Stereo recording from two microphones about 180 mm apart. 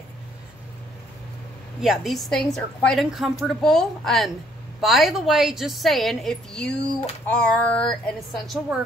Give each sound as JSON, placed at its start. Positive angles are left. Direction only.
{"t": 1.8, "sound": "a woman's voice", "side_deg": 0}